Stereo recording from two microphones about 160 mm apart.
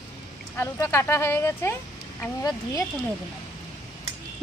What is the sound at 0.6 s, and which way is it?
Speech, 15° left (ahead or behind).